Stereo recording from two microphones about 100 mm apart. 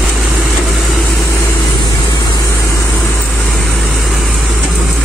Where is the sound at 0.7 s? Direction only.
Centre (ahead or behind).